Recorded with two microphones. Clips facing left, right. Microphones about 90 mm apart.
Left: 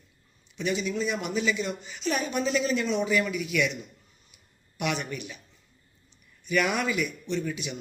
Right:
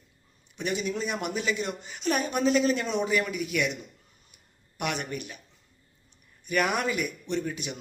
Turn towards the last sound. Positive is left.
turn(degrees=-40)  # may be behind; listen again after turning